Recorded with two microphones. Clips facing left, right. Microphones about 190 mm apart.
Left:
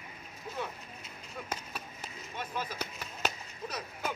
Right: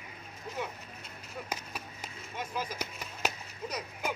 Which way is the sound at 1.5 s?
10° right (ahead or behind).